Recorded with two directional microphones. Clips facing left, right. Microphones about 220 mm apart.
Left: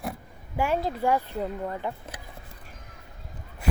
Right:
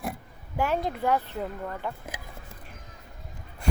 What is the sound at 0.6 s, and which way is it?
Speech, 10° left (ahead or behind).